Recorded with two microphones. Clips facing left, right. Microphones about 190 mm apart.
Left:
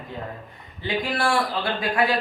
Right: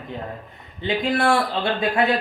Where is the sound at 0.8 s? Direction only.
25° right (ahead or behind).